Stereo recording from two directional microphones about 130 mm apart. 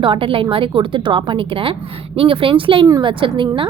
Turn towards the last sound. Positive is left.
turn(degrees=-40)  # may be behind; listen again after turning